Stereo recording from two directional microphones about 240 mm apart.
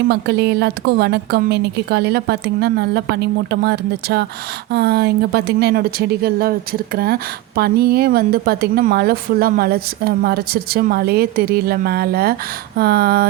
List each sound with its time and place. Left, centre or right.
0.1 s a woman's voice: right